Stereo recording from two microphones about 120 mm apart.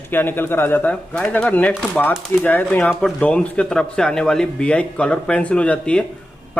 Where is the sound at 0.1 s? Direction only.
15° left (ahead or behind).